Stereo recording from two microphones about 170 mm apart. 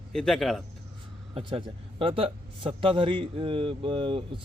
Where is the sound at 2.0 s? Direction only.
30° right (ahead or behind).